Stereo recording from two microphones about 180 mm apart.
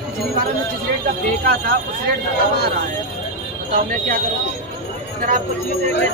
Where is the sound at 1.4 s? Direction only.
55° right (ahead or behind).